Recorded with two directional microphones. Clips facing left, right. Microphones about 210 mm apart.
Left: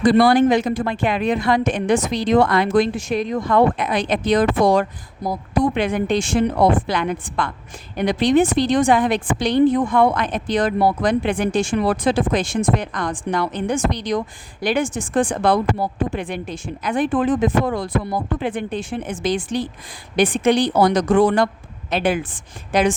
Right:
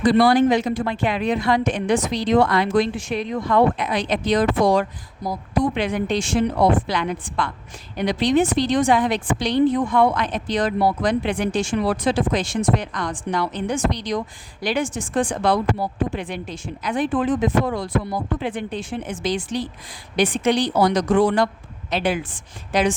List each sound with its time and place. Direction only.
0.0 s a woman's voice: 50° left (ahead or behind)